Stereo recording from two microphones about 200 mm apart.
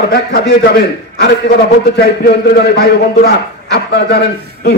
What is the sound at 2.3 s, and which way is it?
A man's voice, 55° left (ahead or behind).